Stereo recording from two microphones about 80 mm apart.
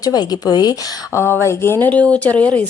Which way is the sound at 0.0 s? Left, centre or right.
Left.